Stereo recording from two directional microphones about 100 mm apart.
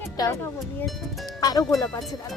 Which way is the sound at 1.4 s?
35° left (ahead or behind).